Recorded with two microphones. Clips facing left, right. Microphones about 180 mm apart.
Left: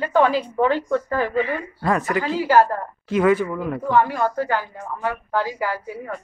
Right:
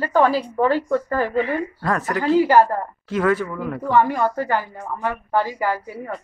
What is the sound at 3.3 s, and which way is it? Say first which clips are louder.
Speech: left 2 dB; 15° left (ahead or behind).